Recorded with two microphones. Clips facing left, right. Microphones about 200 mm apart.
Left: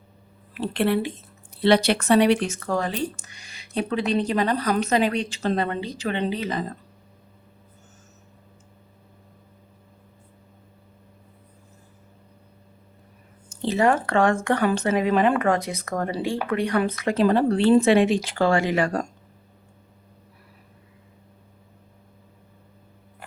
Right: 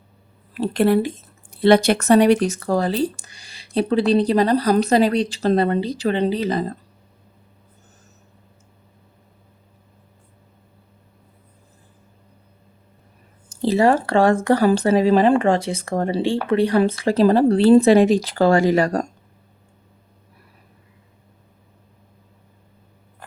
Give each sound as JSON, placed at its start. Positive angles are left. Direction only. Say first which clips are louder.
{"t": 0.5, "sound": "speech", "louder": "right 5 dB", "side_deg": -40}
{"t": 13.5, "sound": "speech", "louder": "right 4 dB", "side_deg": -35}